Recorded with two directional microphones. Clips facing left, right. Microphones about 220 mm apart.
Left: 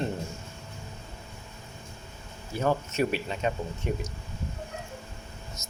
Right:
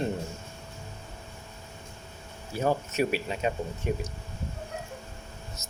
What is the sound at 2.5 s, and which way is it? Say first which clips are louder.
Speech: even; 10° right (ahead or behind).